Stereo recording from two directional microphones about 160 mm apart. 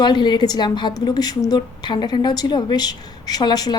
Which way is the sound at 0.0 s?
30° left (ahead or behind).